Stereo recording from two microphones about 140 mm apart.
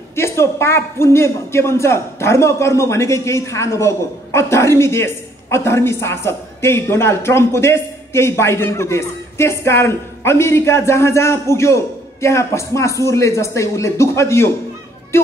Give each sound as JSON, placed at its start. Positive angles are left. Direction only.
{"t": 0.1, "sound": "a man's voice", "side_deg": 20}